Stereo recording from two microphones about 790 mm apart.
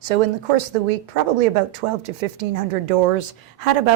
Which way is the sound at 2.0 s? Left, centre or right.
Right.